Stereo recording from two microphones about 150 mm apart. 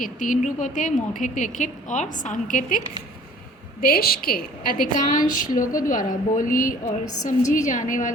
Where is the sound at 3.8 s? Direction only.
85° left.